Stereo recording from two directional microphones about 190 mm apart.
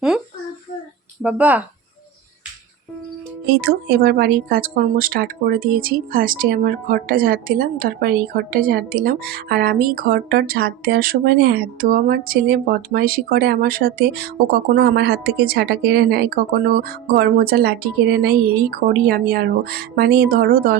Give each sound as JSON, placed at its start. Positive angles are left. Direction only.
{"t": 1.2, "sound": "speech", "side_deg": -10}
{"t": 3.6, "sound": "speech", "side_deg": -55}